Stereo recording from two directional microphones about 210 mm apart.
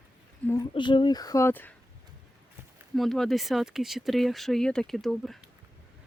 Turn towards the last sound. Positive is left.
turn(degrees=0)  # may be behind; listen again after turning